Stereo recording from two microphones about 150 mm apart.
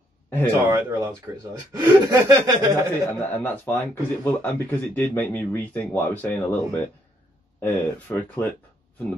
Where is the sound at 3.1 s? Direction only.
15° left (ahead or behind).